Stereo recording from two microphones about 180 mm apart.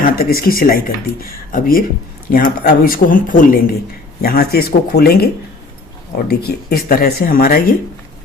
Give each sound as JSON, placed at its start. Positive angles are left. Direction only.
{"t": 0.0, "sound": "speech", "side_deg": 55}
{"t": 4.2, "sound": "speech", "side_deg": 60}